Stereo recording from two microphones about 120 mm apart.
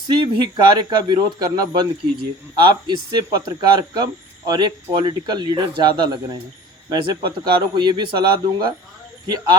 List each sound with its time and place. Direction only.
0.1 s speech: 40° right (ahead or behind)
2.6 s speech: 40° right (ahead or behind)